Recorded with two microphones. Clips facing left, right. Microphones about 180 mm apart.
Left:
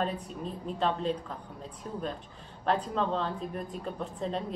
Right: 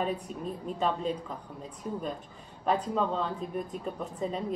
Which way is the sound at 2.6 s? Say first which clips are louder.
Right 1 dB; 5° right (ahead or behind).